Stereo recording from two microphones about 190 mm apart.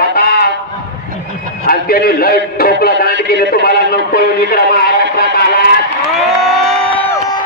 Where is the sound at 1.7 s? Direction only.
50° left (ahead or behind).